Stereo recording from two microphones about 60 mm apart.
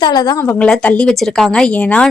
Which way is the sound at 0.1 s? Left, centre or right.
Left.